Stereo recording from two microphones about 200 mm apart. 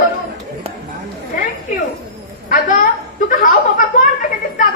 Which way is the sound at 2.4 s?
45° left (ahead or behind).